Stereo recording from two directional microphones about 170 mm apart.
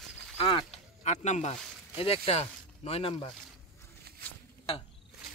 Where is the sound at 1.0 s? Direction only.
45° left (ahead or behind).